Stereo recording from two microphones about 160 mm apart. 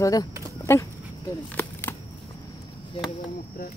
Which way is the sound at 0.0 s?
25° left (ahead or behind).